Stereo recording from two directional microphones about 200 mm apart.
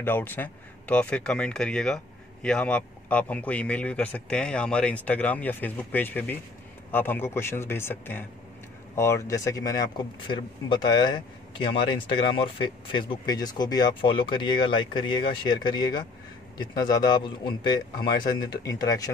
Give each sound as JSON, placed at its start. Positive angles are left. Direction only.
{"t": 0.0, "sound": "speech", "side_deg": 10}